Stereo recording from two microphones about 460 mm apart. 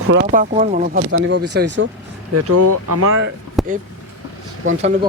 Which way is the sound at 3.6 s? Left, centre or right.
Centre.